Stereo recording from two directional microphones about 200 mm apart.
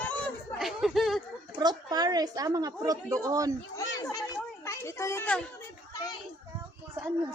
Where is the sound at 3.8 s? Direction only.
15° left (ahead or behind).